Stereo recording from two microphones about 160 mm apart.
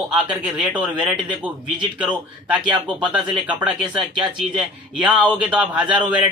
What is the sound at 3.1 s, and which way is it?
Speech, 5° right (ahead or behind).